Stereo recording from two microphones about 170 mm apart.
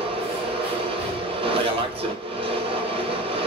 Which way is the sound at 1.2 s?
30° right (ahead or behind).